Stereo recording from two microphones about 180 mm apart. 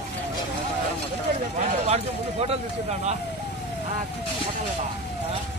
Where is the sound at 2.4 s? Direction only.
35° right (ahead or behind).